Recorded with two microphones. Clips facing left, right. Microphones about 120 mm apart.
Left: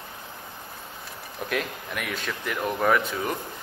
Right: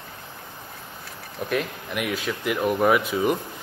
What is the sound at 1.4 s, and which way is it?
A man's voice, 5° right (ahead or behind).